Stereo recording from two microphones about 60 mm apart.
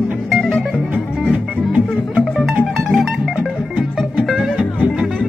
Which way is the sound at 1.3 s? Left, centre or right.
Right.